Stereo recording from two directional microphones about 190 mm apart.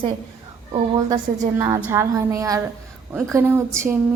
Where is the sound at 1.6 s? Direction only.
15° right (ahead or behind).